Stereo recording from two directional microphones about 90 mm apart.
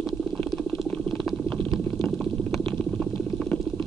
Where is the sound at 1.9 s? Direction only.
10° left (ahead or behind).